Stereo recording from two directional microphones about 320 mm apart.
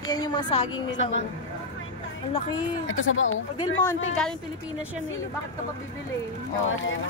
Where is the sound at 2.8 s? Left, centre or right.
Left.